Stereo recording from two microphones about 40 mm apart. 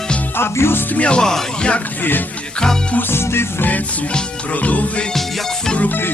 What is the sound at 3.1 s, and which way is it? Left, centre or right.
Music, left.